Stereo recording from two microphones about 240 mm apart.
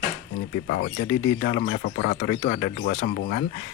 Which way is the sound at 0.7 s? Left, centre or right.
Left.